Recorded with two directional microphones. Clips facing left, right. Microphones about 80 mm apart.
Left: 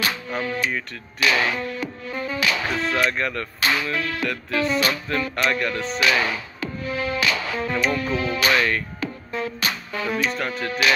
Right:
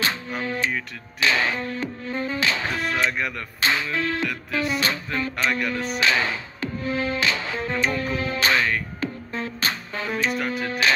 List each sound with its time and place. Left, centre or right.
0.4 s music: right
3.1 s music: centre
3.6 s music: right
4.3 s music: centre
4.7 s music: right
5.5 s music: centre
5.9 s music: right
10.3 s music: centre